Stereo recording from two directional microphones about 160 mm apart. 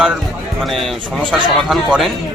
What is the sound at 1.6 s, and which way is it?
Speech, centre (ahead or behind).